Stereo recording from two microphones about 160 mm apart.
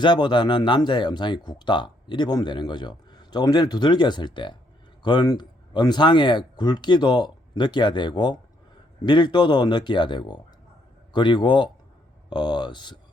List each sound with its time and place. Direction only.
0.0 s speech: 30° left (ahead or behind)